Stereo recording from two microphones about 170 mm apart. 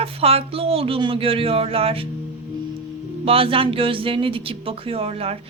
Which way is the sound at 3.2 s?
35° right (ahead or behind).